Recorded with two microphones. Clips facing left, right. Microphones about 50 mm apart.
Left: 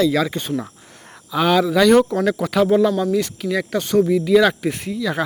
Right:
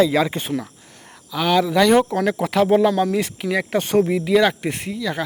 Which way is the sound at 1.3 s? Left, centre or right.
Centre.